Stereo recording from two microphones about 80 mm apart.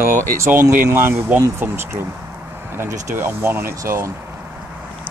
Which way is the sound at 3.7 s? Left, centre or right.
Right.